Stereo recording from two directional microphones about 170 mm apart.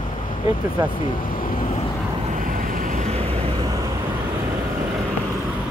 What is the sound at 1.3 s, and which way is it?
Vehicle, 55° left (ahead or behind).